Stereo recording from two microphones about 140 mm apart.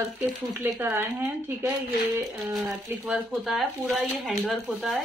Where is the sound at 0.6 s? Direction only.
15° right (ahead or behind).